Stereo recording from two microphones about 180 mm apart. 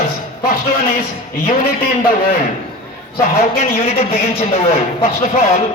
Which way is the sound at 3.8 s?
35° left (ahead or behind).